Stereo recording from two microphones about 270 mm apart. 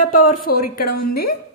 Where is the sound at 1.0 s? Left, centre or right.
Left.